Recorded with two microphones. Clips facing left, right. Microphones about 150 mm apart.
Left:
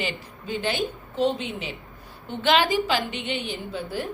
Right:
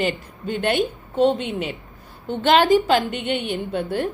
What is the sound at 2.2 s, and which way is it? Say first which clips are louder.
A woman's voice: right 5 dB; 45° right (ahead or behind).